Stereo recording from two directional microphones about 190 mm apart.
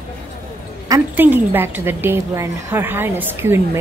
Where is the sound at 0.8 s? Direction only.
15° right (ahead or behind).